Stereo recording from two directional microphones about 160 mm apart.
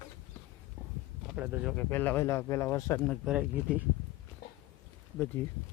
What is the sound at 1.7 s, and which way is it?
Speech, 10° left (ahead or behind).